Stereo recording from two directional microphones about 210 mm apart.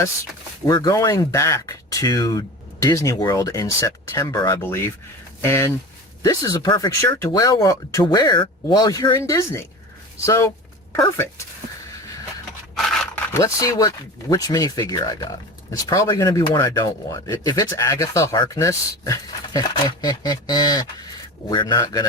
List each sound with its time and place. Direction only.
0.7 s speech: 15° left (ahead or behind)
12.7 s a man's voice: 10° left (ahead or behind)